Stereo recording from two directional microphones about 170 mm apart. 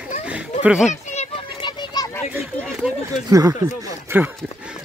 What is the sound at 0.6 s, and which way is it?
Speech, 5° right (ahead or behind).